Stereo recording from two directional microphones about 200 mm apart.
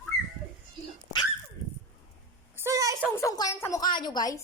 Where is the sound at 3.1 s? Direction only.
15° left (ahead or behind).